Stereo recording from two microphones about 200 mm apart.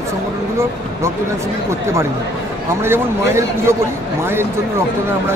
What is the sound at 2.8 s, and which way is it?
Speech, 10° right (ahead or behind).